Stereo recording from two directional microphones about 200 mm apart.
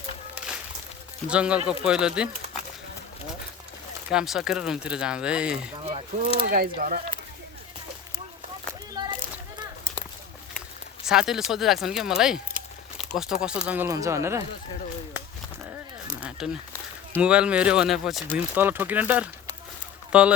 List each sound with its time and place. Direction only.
1.3 s speech: 5° right (ahead or behind)
4.1 s speech: 5° right (ahead or behind)
6.2 s speech: 45° right (ahead or behind)
9.0 s children playing: 20° right (ahead or behind)
11.0 s speech: 5° right (ahead or behind)
13.0 s a sound: centre (ahead or behind)
13.4 s speech: 5° right (ahead or behind)
16.2 s a sound: 5° right (ahead or behind)
17.2 s speech: 5° right (ahead or behind)